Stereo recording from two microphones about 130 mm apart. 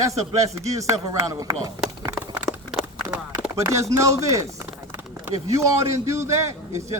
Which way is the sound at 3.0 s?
90° right.